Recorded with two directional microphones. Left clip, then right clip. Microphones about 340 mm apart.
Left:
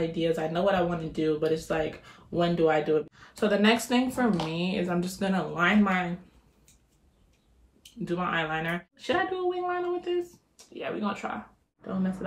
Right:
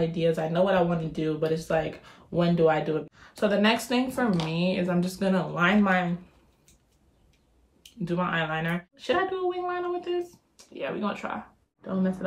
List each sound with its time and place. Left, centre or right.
0.1 s speech: centre
7.8 s speech: centre